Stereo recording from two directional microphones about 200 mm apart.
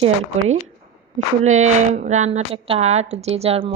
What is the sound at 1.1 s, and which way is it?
A woman's voice, 35° right (ahead or behind).